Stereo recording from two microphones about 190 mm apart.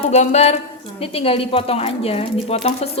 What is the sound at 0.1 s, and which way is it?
A woman's voice, 40° left (ahead or behind).